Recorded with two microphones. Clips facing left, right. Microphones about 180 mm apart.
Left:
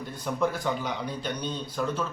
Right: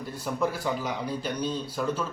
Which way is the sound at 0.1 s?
10° right (ahead or behind).